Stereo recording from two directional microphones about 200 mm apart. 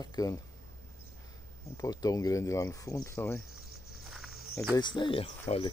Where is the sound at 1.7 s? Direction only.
20° left (ahead or behind).